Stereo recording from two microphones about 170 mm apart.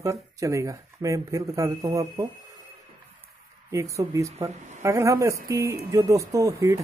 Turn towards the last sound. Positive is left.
turn(degrees=-20)  # may be behind; listen again after turning